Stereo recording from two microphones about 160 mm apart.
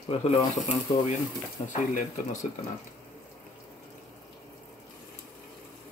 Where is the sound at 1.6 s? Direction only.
55° left (ahead or behind).